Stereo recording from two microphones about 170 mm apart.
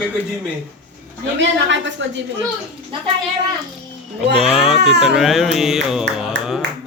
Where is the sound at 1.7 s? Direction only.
90° right.